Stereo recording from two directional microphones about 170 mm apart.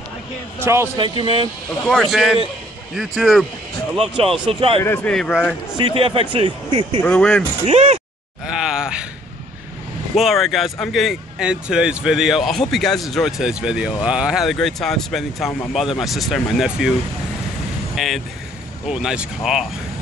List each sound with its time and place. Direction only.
0.7 s a man's voice: 15° right (ahead or behind)
1.0 s speech: 30° right (ahead or behind)
1.9 s speech: centre (ahead or behind)
4.5 s speech: 30° right (ahead or behind)
4.8 s speech: 10° left (ahead or behind)
5.8 s speech: 30° right (ahead or behind)
7.0 s speech: 10° left (ahead or behind)
7.6 s speech: 40° right (ahead or behind)
10.1 s speech: centre (ahead or behind)
17.9 s speech: centre (ahead or behind)